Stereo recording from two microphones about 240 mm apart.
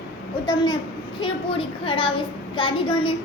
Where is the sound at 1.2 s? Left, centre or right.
Left.